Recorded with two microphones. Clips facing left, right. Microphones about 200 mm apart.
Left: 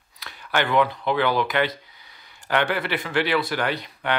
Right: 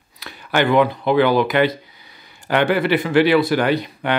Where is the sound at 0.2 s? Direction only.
10° right (ahead or behind).